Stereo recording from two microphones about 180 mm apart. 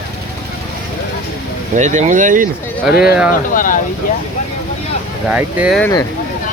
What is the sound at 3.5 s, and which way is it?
Speech, 50° left (ahead or behind).